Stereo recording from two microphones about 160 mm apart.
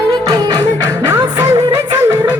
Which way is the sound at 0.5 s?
90° left.